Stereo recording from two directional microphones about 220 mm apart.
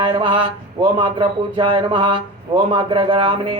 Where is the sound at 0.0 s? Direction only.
20° right (ahead or behind).